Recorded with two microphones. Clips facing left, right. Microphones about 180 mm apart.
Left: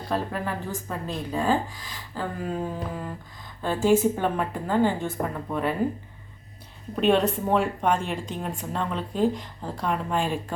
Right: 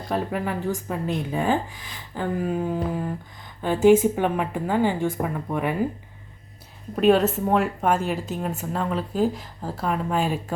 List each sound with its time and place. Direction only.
0.1 s speech: 15° right (ahead or behind)
3.6 s speech: 15° right (ahead or behind)
7.0 s a woman's voice: 5° right (ahead or behind)